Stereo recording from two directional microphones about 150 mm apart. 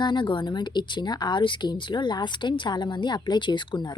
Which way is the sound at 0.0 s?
30° left (ahead or behind).